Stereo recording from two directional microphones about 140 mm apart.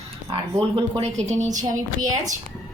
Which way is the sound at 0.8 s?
45° right (ahead or behind).